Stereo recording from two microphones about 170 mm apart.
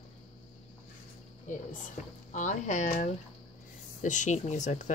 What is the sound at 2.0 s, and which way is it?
Speech, 45° left (ahead or behind).